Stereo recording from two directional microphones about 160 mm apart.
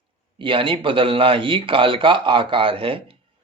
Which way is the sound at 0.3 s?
30° right (ahead or behind).